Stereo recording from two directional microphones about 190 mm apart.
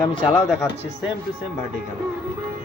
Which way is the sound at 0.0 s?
25° left (ahead or behind).